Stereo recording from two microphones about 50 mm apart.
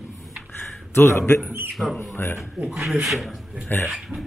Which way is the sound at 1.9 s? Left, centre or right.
Left.